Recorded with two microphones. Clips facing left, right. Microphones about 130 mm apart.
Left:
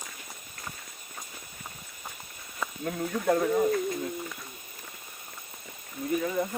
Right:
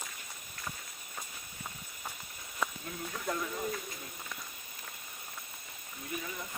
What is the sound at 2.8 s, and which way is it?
Speech, 60° left (ahead or behind).